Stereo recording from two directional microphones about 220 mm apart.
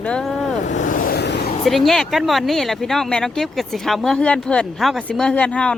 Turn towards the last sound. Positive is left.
turn(degrees=5)  # may be behind; listen again after turning